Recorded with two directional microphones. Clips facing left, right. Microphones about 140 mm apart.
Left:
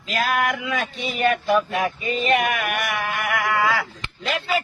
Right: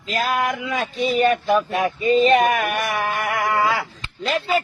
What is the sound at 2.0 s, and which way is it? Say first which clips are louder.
Speech: right 8 dB; 30° right (ahead or behind).